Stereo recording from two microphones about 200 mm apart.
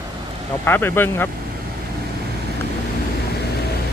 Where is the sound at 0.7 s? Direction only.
10° left (ahead or behind).